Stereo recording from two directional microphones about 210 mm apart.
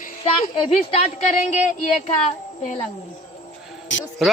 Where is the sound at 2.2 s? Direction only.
35° left (ahead or behind).